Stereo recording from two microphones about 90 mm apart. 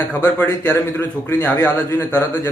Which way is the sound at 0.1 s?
20° left (ahead or behind).